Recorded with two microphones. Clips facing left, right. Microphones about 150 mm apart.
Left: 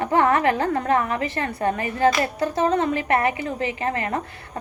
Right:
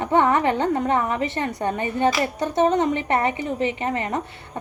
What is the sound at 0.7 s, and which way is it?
A woman's voice, 20° right (ahead or behind).